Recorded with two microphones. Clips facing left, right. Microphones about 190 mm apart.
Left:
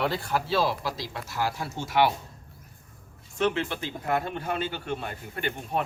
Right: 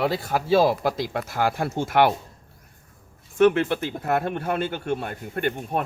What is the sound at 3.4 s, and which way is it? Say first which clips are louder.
Speech: right 8 dB; 55° right (ahead or behind).